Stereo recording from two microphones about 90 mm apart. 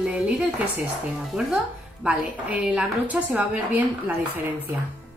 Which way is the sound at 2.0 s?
15° right (ahead or behind).